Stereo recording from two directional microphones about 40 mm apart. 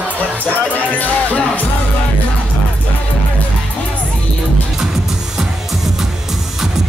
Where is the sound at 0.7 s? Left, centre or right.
Left.